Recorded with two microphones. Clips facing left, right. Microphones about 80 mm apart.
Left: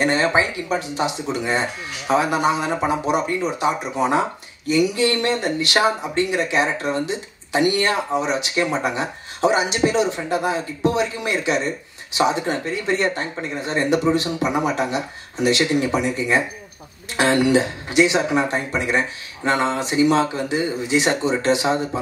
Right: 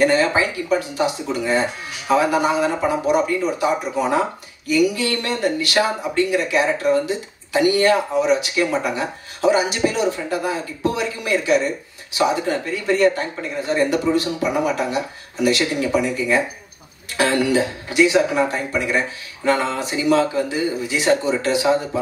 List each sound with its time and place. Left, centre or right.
0.0 s speech: left